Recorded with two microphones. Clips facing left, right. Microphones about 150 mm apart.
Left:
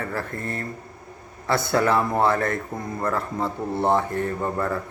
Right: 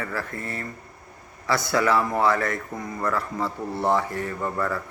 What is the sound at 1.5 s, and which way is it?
Speech, 55° left (ahead or behind).